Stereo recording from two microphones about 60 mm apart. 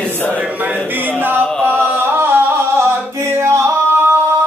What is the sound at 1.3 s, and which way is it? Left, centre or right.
Music, right.